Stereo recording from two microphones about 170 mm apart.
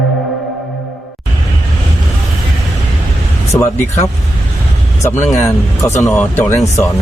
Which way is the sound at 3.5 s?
15° left (ahead or behind).